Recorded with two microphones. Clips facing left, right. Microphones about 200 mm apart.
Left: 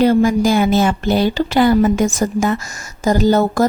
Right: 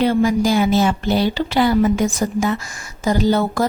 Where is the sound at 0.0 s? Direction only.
45° left (ahead or behind).